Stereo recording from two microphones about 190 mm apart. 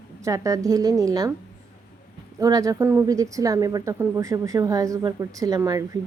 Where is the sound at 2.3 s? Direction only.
20° right (ahead or behind).